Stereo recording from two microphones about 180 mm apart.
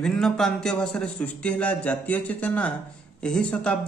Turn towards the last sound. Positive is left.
turn(degrees=5)  # may be behind; listen again after turning